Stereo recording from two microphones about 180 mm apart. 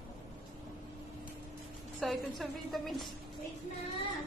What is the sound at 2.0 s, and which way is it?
A woman's voice, centre (ahead or behind).